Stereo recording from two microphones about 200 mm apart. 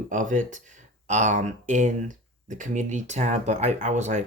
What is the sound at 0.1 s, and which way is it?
Speech, 40° right (ahead or behind).